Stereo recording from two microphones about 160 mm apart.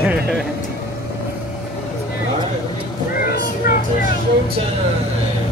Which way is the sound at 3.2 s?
70° left (ahead or behind).